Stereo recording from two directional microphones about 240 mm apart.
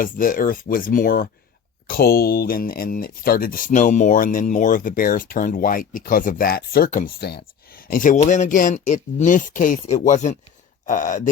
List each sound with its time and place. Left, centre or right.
0.0 s speech: left